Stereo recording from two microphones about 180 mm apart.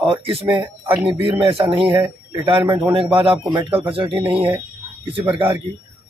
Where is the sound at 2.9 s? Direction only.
30° right (ahead or behind).